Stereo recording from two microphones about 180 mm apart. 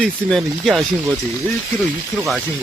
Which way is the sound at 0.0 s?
5° left (ahead or behind).